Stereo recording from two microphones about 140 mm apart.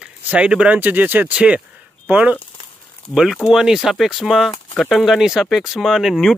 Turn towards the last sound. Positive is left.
turn(degrees=0)  # may be behind; listen again after turning